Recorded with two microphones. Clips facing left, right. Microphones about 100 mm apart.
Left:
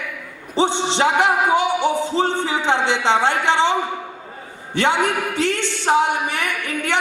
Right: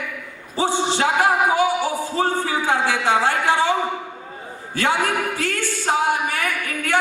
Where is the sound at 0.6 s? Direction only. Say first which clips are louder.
Left 2 dB; 20° left (ahead or behind).